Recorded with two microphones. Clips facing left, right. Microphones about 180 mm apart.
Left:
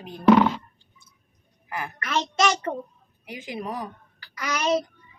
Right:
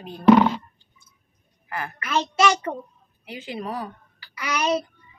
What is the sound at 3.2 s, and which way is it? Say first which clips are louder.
Speech: right 1 dB; 15° left (ahead or behind).